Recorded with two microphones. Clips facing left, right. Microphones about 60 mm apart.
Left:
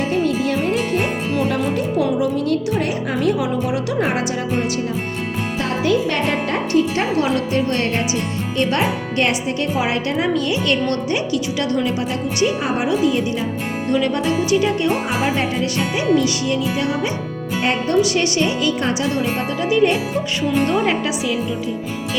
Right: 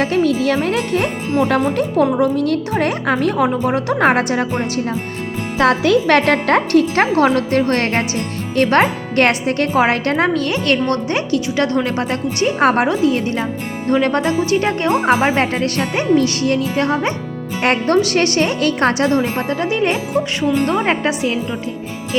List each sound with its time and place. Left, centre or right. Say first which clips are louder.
0.2 s speech: right 4 dB; left
0.4 s speech: right 2 dB; right
1.7 s a woman's voice: right 3 dB; right
5.5 s speech: right 6 dB; right
7.3 s a woman's voice: right 4 dB; right
12.9 s a woman's voice: right 1 dB; right
17.6 s speech: right 4 dB; right
17.9 s a woman's voice: right 2 dB; right